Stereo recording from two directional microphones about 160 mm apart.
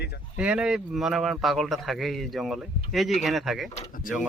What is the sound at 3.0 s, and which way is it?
Speech, centre (ahead or behind).